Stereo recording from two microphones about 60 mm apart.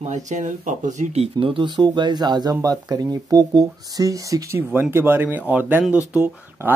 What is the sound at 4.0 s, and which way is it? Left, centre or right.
Speech, right.